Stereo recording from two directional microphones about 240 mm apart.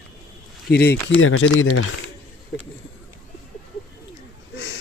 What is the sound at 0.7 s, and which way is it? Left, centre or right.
Speech, left.